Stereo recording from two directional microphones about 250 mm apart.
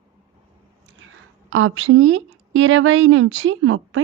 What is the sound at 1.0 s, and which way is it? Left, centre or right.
Speech, right.